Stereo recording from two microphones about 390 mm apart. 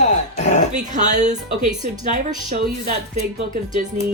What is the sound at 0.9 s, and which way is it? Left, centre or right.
A woman's voice, centre.